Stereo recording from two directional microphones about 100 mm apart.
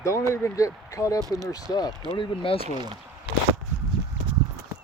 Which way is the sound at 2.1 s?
65° left (ahead or behind).